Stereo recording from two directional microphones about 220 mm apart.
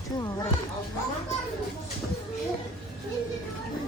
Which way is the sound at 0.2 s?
15° left (ahead or behind).